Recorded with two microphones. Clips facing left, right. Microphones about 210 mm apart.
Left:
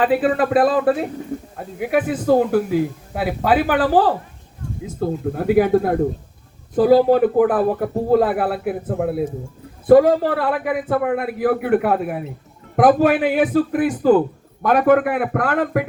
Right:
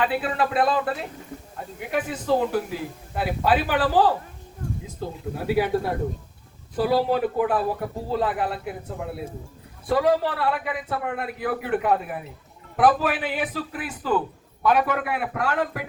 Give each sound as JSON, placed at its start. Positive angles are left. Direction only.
{"t": 0.0, "sound": "a man's voice", "side_deg": 50}